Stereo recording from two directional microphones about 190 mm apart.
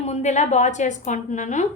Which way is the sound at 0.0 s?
35° left (ahead or behind).